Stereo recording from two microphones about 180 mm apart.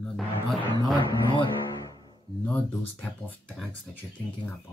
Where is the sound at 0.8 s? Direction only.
25° left (ahead or behind).